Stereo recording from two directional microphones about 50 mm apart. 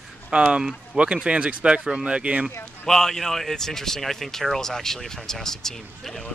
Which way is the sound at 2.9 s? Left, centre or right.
Centre.